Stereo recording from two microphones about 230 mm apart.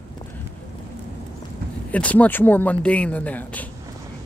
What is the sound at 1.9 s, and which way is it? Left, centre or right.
Speech, centre.